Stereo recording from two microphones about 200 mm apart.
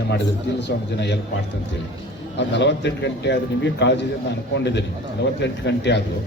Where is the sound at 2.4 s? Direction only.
60° left (ahead or behind).